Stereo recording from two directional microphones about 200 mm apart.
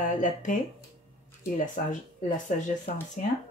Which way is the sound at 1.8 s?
40° left (ahead or behind).